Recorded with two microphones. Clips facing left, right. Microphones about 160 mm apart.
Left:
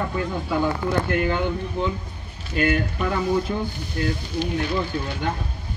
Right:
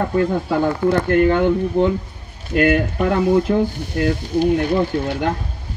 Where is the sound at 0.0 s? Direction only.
50° right (ahead or behind).